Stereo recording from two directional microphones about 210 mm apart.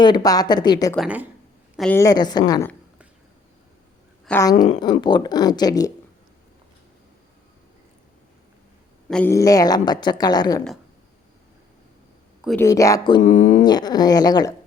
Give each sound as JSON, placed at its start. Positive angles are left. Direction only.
{"t": 0.0, "sound": "speech", "side_deg": 20}
{"t": 0.9, "sound": "a woman's voice", "side_deg": -5}
{"t": 2.0, "sound": "speech", "side_deg": 20}
{"t": 4.3, "sound": "speech", "side_deg": 10}
{"t": 9.0, "sound": "speech", "side_deg": 5}
{"t": 9.3, "sound": "speech", "side_deg": 15}
{"t": 12.5, "sound": "speech", "side_deg": 10}
{"t": 13.2, "sound": "speech", "side_deg": 35}
{"t": 13.7, "sound": "speech", "side_deg": 20}